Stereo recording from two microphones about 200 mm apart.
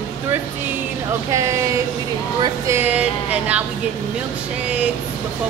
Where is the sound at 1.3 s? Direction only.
15° right (ahead or behind).